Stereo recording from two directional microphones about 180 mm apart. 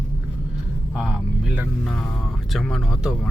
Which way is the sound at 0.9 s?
Centre (ahead or behind).